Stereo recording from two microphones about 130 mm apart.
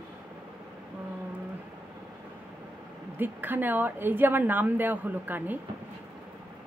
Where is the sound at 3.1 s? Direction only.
15° right (ahead or behind).